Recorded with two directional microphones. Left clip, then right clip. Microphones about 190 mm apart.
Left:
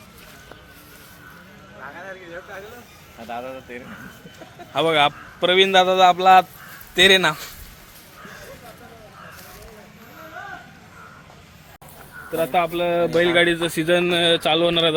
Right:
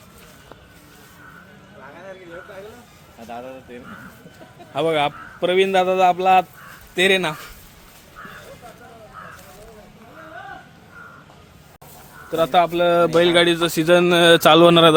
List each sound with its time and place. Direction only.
3.2 s speech: 25° left (ahead or behind)
4.7 s a man's voice: 15° right (ahead or behind); by 7.5 s 5° left (ahead or behind)
12.3 s speech: 30° right (ahead or behind); by 14.9 s 50° right (ahead or behind)